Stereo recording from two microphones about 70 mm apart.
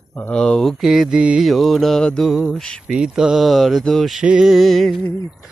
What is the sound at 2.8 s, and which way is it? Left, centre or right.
Mantra, centre.